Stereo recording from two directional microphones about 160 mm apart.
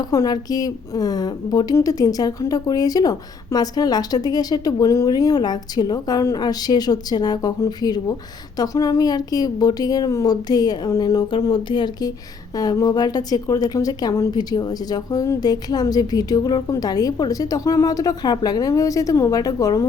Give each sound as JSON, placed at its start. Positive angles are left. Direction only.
{"t": 0.0, "sound": "a woman's voice", "side_deg": 25}